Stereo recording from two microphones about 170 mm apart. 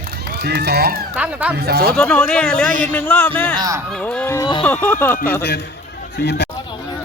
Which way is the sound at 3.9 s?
5° left (ahead or behind).